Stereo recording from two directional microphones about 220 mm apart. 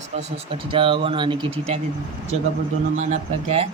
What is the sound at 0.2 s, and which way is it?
Speech, 25° right (ahead or behind).